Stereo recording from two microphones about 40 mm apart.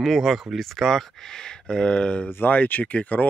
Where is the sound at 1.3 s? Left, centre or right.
Centre.